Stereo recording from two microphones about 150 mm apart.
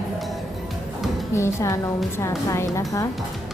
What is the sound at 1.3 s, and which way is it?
Speech, 20° left (ahead or behind).